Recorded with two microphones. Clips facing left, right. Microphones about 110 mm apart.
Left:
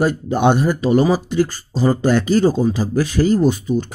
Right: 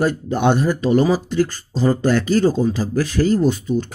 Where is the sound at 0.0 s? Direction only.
15° left (ahead or behind).